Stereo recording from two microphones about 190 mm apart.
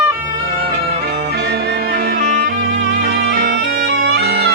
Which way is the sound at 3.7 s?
55° right (ahead or behind).